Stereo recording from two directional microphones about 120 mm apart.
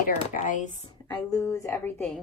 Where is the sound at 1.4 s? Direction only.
25° left (ahead or behind).